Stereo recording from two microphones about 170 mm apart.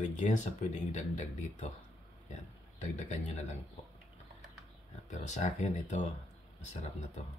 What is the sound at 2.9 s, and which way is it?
Speech, 45° left (ahead or behind).